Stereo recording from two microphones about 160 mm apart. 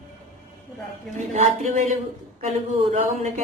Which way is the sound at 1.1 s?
Centre (ahead or behind).